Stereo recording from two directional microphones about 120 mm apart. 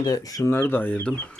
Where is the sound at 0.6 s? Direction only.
15° left (ahead or behind).